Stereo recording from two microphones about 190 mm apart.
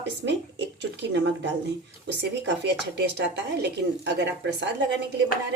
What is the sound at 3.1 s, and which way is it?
Speech, 65° right (ahead or behind).